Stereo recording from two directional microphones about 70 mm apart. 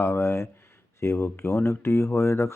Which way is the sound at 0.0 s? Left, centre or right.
Left.